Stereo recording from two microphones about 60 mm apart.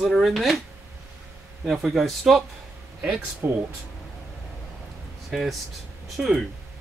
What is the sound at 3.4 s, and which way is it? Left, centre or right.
Speech, right.